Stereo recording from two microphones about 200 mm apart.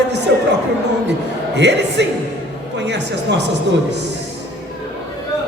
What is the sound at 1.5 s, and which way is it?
A man's voice, 60° right (ahead or behind).